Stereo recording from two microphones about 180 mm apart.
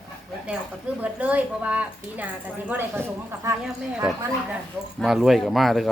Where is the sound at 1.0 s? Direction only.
10° right (ahead or behind).